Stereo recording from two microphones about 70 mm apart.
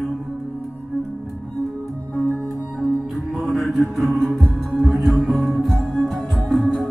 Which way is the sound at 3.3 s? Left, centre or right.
Centre.